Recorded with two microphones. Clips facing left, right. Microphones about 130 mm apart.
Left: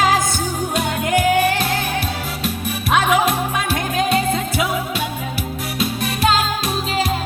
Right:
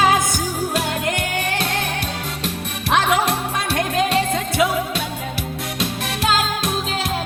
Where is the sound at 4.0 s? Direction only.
5° left (ahead or behind).